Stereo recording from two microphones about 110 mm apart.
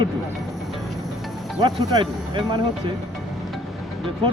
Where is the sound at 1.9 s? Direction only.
50° right (ahead or behind).